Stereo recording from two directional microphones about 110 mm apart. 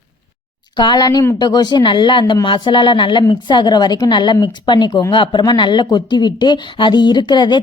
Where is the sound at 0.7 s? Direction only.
40° left (ahead or behind).